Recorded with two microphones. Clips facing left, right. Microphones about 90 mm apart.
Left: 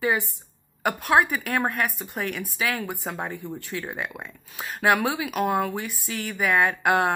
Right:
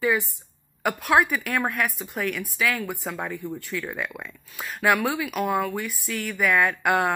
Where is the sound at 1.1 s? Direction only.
Centre (ahead or behind).